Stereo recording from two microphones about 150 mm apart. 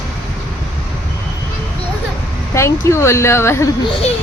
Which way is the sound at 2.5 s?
20° left (ahead or behind).